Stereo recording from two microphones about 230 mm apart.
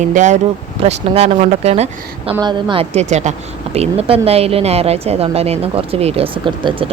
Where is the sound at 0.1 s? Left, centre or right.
Right.